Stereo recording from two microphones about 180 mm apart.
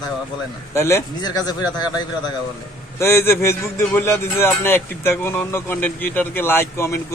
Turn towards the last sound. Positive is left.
turn(degrees=15)  # may be behind; listen again after turning